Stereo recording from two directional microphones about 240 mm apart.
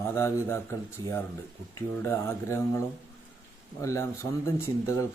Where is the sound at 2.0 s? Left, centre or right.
Centre.